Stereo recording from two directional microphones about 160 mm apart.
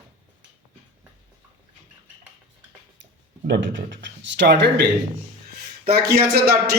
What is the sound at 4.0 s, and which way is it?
Speech, 90° right.